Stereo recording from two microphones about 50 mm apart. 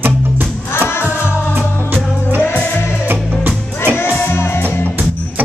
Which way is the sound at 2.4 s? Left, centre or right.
Left.